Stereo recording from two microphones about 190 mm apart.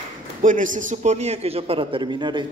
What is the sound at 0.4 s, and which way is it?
A man's voice, 45° right (ahead or behind).